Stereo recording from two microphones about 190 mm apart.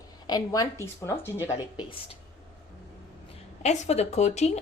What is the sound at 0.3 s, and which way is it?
Speech, 20° left (ahead or behind).